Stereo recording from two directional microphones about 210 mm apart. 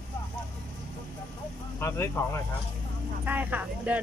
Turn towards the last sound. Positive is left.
turn(degrees=-5)  # may be behind; listen again after turning